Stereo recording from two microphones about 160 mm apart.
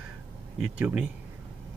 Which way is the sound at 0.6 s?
5° right (ahead or behind).